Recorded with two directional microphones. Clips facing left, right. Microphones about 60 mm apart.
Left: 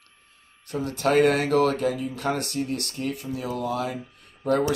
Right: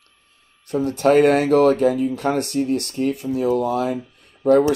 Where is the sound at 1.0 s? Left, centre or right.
Right.